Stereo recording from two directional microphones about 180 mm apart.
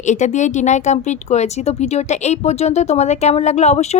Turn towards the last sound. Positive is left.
turn(degrees=35)  # may be behind; listen again after turning